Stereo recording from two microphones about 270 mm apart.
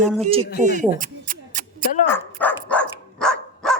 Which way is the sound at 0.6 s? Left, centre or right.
Right.